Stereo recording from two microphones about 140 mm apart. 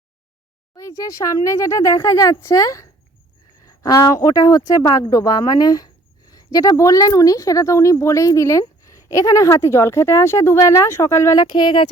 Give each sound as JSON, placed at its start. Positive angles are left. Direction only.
{"t": 0.8, "sound": "speech", "side_deg": 25}